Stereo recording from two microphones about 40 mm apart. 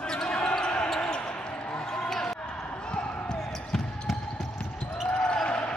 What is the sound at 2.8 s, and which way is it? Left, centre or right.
Basketball bounce, left.